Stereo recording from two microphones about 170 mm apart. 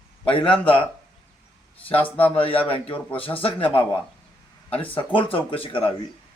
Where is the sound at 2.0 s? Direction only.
10° left (ahead or behind).